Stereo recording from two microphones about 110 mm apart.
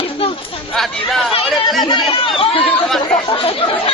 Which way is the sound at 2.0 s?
60° left (ahead or behind).